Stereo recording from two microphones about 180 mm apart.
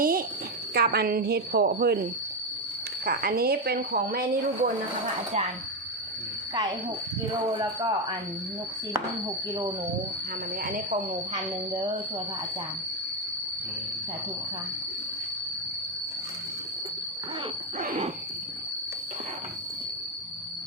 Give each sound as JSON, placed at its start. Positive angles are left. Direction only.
{"t": 0.0, "sound": "a sound", "side_deg": -55}
{"t": 0.7, "sound": "a woman's voice", "side_deg": -60}
{"t": 3.1, "sound": "a woman's voice", "side_deg": -55}
{"t": 6.5, "sound": "speech", "side_deg": -25}
{"t": 10.6, "sound": "a woman's voice", "side_deg": -50}